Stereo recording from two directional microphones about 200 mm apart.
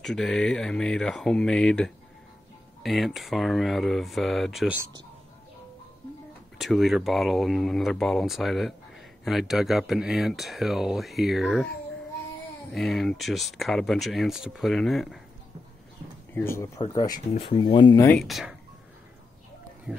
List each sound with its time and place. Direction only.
0.0 s speech: 5° left (ahead or behind)
6.6 s speech: centre (ahead or behind)
12.7 s speech: centre (ahead or behind)
16.3 s speech: 15° left (ahead or behind)
18.0 s speech: 5° left (ahead or behind)
19.9 s speech: 5° right (ahead or behind)